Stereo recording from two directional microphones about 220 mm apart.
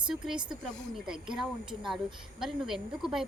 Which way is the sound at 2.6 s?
Centre (ahead or behind).